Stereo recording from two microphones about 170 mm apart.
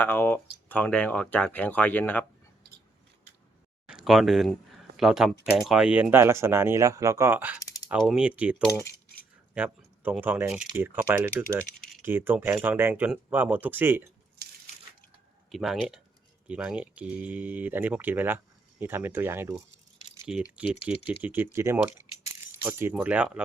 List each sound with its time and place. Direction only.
0.0 s speech: 10° left (ahead or behind)
3.8 s speech: 5° right (ahead or behind)
7.6 s typing: 20° left (ahead or behind)
7.9 s speech: centre (ahead or behind)
15.4 s speech: centre (ahead or behind)
20.9 s speech: 35° left (ahead or behind)
21.2 s speech: 10° right (ahead or behind)